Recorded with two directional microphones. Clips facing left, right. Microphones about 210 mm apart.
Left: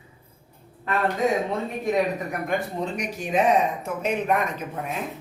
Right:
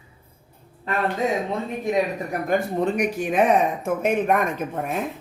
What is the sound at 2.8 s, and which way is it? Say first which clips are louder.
Speech: right 7 dB; 55° right (ahead or behind).